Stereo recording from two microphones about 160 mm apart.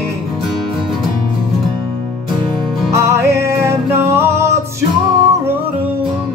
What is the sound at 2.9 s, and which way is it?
Music, 15° right (ahead or behind).